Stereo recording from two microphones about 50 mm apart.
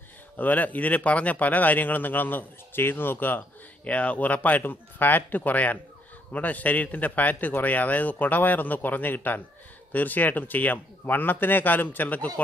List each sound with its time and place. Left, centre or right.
0.4 s speech: left